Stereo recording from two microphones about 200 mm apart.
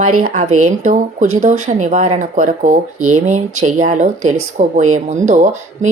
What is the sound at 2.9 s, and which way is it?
Speech, 90° right.